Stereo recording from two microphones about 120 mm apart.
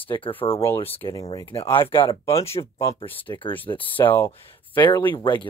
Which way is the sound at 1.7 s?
45° left (ahead or behind).